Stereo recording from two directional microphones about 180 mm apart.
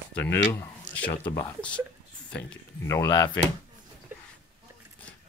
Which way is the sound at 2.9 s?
20° left (ahead or behind).